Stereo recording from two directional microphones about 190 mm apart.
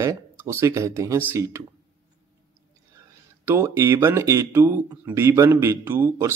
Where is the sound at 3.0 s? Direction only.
10° right (ahead or behind).